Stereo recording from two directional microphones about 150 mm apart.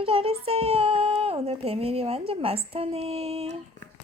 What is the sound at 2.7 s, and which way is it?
Female singing, 40° right (ahead or behind).